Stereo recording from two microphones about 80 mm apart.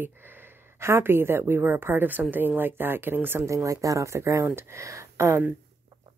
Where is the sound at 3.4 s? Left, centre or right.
Right.